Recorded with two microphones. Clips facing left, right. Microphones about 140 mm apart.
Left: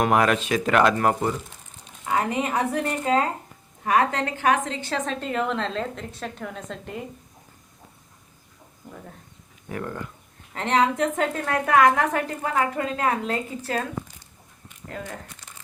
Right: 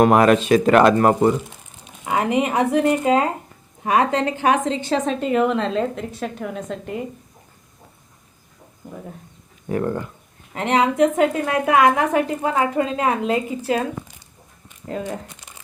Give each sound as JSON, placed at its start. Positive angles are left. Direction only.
{"t": 0.0, "sound": "speech", "side_deg": -40}
{"t": 2.0, "sound": "a woman's voice", "side_deg": -15}
{"t": 9.6, "sound": "speech", "side_deg": -30}
{"t": 10.5, "sound": "a woman's voice", "side_deg": -10}
{"t": 14.8, "sound": "speech", "side_deg": -20}